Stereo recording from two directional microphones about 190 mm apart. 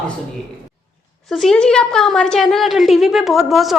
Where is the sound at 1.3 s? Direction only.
Centre (ahead or behind).